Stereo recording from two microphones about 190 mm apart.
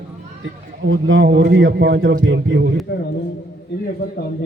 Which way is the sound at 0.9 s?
85° right.